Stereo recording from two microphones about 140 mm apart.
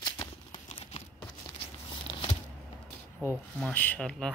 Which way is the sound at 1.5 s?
35° left (ahead or behind).